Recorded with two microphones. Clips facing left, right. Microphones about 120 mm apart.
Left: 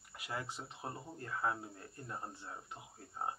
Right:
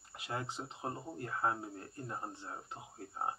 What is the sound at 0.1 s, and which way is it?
Speech, 25° right (ahead or behind).